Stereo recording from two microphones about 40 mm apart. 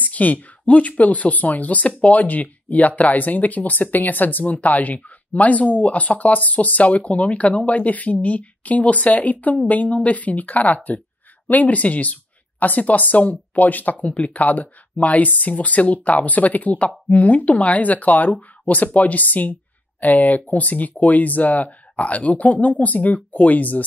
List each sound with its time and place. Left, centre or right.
0.0 s speech: left